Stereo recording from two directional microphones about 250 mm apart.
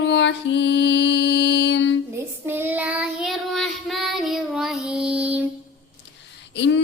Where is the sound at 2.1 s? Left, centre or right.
Centre.